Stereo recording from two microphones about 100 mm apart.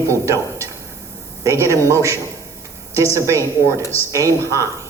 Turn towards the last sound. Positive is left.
turn(degrees=-30)  # may be behind; listen again after turning